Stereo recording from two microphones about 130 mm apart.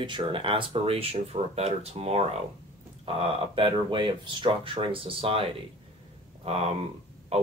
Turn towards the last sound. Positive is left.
turn(degrees=-50)  # may be behind; listen again after turning